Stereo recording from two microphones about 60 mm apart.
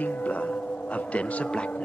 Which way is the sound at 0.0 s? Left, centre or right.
Left.